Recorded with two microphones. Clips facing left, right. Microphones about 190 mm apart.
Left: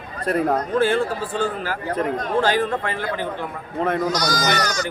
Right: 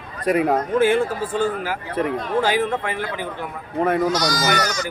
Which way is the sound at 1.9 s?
45° left (ahead or behind).